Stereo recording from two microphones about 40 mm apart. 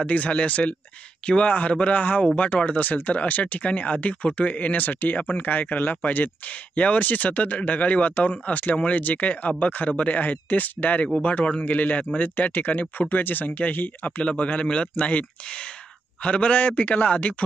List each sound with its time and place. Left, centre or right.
0.0 s speech: left
6.5 s speech: left
10.1 s speech: left
14.2 s a man's voice: left